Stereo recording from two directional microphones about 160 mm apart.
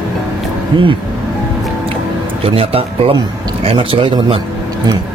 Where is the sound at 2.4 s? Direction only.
35° right (ahead or behind).